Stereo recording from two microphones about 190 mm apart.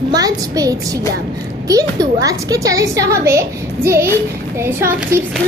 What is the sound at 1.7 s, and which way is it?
A woman's voice, 20° right (ahead or behind).